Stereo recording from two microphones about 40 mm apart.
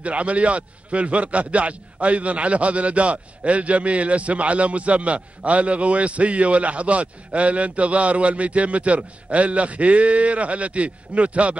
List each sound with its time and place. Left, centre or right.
0.0 s a man's voice: right